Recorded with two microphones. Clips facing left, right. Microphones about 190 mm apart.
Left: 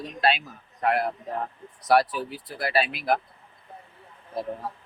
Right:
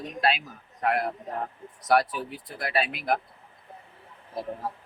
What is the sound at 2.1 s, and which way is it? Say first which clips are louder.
Speech: left 2 dB; centre (ahead or behind).